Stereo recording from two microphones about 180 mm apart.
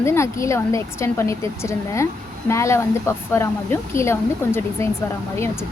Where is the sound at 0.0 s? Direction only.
15° left (ahead or behind).